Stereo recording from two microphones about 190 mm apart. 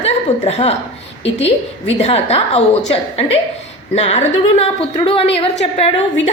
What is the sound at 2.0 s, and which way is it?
A woman's voice, 35° left (ahead or behind).